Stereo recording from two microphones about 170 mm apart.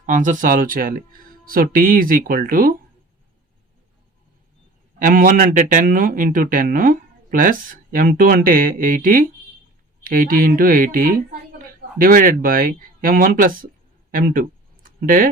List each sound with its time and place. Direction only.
0.0 s speech: 50° right (ahead or behind)
4.9 s a woman's voice: 50° right (ahead or behind)
14.8 s a sound: 55° right (ahead or behind)